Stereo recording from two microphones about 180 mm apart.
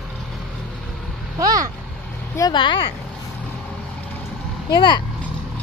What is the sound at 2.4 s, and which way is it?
Speech, 25° left (ahead or behind).